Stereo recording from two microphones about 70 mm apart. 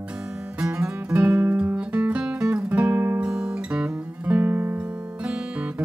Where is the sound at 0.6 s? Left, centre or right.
Right.